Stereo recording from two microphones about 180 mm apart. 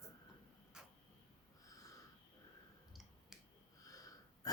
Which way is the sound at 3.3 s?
Centre (ahead or behind).